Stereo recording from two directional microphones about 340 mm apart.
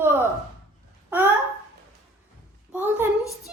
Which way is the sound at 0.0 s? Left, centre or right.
Centre.